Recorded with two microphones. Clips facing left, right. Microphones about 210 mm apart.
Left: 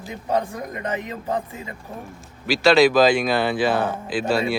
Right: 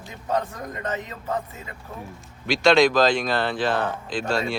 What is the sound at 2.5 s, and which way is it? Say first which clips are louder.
Speech: left 2 dB; 5° left (ahead or behind).